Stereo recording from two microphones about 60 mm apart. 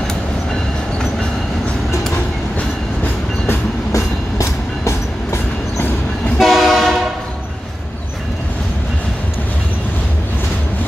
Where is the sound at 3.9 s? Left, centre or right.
Left.